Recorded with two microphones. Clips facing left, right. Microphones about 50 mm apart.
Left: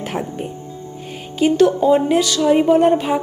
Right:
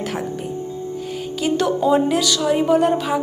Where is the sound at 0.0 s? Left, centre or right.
Centre.